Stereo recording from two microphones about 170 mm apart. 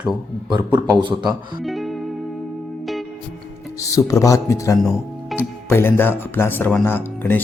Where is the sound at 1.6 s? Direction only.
Centre (ahead or behind).